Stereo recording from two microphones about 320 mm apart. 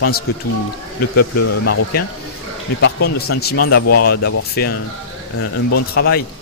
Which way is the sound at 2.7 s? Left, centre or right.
Left.